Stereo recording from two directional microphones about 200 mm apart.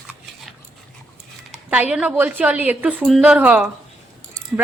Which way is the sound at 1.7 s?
5° right (ahead or behind).